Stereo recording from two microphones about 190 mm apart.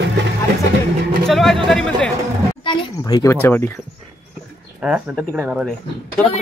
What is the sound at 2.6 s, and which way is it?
Speech, 25° left (ahead or behind).